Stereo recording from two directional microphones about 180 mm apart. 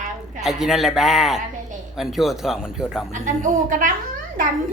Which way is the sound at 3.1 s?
45° right (ahead or behind).